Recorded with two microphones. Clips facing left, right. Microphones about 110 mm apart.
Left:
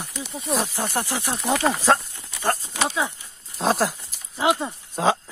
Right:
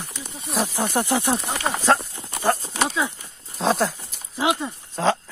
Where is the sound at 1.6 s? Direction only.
Centre (ahead or behind).